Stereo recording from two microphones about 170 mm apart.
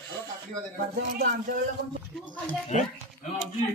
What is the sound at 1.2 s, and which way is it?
Speech, 55° right (ahead or behind).